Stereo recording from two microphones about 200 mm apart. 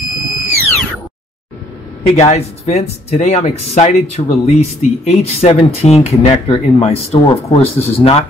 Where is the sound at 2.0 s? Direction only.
35° left (ahead or behind).